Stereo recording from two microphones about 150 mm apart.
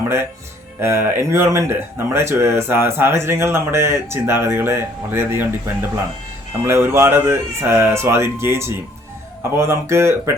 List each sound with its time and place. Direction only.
0.8 s speech: 15° right (ahead or behind)